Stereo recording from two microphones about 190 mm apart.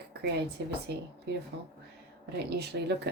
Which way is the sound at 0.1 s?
60° right (ahead or behind).